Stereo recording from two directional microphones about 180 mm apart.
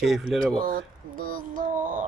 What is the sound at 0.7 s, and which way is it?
Child singing, 50° right (ahead or behind).